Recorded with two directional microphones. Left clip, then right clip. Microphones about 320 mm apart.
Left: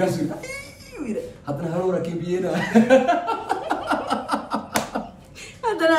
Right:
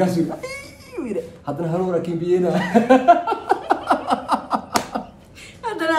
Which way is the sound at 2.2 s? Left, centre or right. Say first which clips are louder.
Right 5 dB; centre.